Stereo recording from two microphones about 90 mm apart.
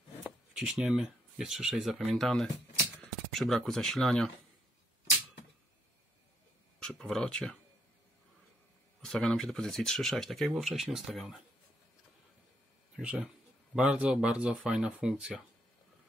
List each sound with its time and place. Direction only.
0.6 s speech: 5° right (ahead or behind)
6.8 s speech: 5° left (ahead or behind)
9.0 s speech: 10° left (ahead or behind)
13.0 s speech: 15° right (ahead or behind)